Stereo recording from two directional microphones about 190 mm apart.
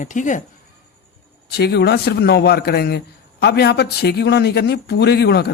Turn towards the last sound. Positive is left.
turn(degrees=60)  # may be behind; listen again after turning